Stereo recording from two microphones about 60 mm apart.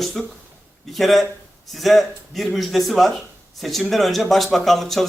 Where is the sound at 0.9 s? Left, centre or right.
Centre.